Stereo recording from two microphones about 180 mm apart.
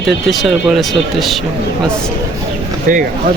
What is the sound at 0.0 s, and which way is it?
Speech, centre (ahead or behind).